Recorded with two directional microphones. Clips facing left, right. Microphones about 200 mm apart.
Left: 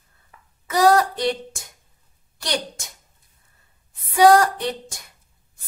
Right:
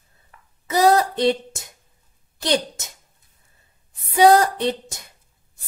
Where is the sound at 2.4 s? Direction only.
25° right (ahead or behind).